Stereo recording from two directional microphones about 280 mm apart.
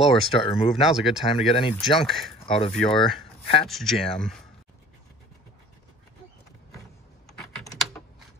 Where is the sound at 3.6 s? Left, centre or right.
Centre.